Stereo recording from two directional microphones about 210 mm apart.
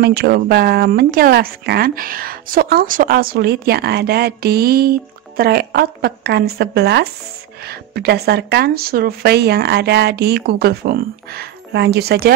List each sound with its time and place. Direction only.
0.0 s speech: 50° right (ahead or behind)